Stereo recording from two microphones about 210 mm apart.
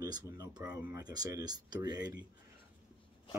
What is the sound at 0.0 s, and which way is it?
Speech, 20° right (ahead or behind).